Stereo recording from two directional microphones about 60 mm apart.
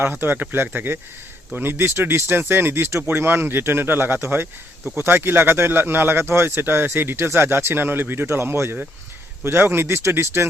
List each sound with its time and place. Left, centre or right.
0.0 s speech: right